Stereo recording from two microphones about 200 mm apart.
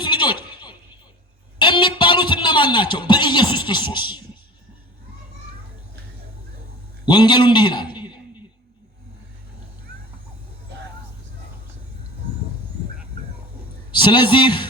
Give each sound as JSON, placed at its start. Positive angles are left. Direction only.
{"t": 0.0, "sound": "a sound", "side_deg": 25}
{"t": 1.5, "sound": "a man's voice", "side_deg": 25}
{"t": 7.0, "sound": "a man's voice", "side_deg": 20}
{"t": 13.9, "sound": "a man's voice", "side_deg": 25}